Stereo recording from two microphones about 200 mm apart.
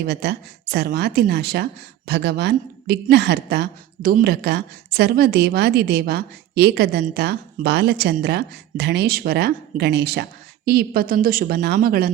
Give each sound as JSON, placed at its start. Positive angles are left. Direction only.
{"t": 0.0, "sound": "a woman's voice", "side_deg": -55}